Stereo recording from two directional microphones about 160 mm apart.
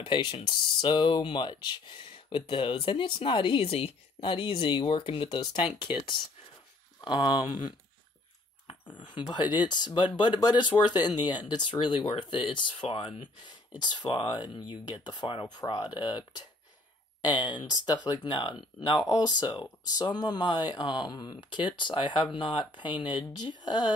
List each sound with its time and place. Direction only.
0.0 s speech: 35° left (ahead or behind)
7.0 s speech: 30° left (ahead or behind)
8.9 s speech: 30° left (ahead or behind)